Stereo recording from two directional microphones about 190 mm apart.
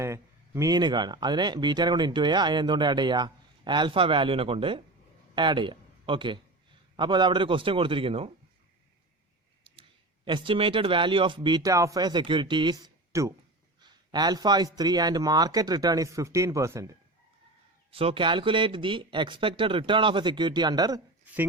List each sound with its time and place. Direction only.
0.0 s speech: 15° right (ahead or behind)
10.2 s speech: 25° right (ahead or behind)
17.9 s speech: 30° right (ahead or behind)